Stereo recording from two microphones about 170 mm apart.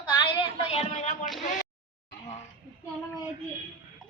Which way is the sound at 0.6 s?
35° left (ahead or behind).